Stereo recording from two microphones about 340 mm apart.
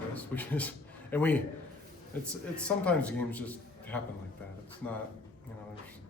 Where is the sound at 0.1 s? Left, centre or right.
Centre.